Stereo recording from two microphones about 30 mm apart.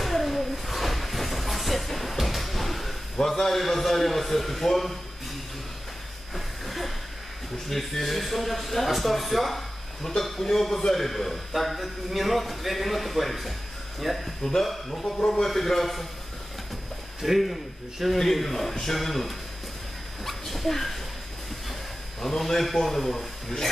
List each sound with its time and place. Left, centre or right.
0.0 s a sound: centre
3.4 s a man's voice: centre
6.3 s a sound: centre
7.7 s a man's voice: centre
14.4 s a man's voice: centre
15.1 s a man's voice: left
15.4 s a man's voice: centre
17.4 s a man's voice: centre
22.2 s a man's voice: centre